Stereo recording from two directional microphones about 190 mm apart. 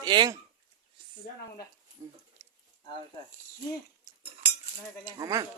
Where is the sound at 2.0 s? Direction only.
15° right (ahead or behind).